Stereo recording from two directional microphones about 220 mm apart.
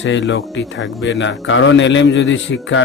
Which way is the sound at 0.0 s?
55° left (ahead or behind).